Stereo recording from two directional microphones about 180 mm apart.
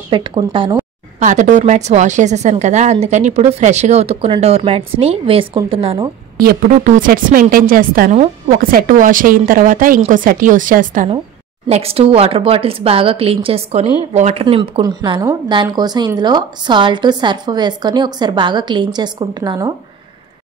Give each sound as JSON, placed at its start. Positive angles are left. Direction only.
{"t": 0.1, "sound": "a woman's voice", "side_deg": -30}
{"t": 1.2, "sound": "a woman's voice", "side_deg": -45}
{"t": 6.3, "sound": "a woman's voice", "side_deg": -50}
{"t": 11.6, "sound": "a woman's voice", "side_deg": -35}